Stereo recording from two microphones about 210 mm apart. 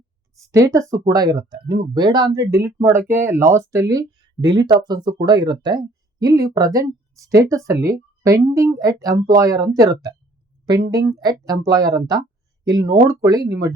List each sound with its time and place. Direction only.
0.3 s speech: 15° right (ahead or behind)